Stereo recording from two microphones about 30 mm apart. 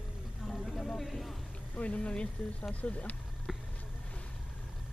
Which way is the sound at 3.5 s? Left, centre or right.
Centre.